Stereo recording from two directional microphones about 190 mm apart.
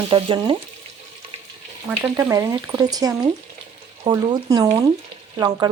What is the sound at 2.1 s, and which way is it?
Speech, 15° right (ahead or behind).